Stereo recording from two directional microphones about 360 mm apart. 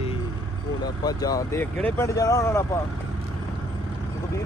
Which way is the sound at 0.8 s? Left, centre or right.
Centre.